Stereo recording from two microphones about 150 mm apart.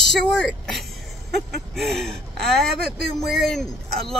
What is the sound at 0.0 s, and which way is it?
A woman's voice, 5° left (ahead or behind).